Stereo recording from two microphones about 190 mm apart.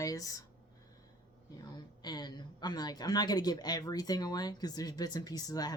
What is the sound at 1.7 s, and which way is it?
A woman's voice, 20° left (ahead or behind).